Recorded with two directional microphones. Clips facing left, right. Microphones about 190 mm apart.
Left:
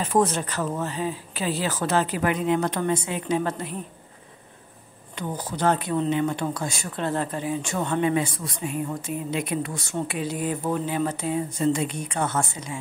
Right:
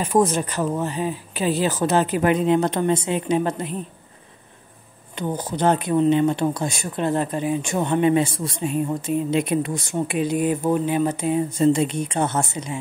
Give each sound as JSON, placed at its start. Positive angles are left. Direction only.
{"t": 0.0, "sound": "speech", "side_deg": -15}
{"t": 5.1, "sound": "speech", "side_deg": -20}